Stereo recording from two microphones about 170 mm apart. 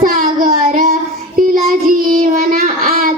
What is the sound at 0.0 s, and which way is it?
Child singing, 55° right (ahead or behind).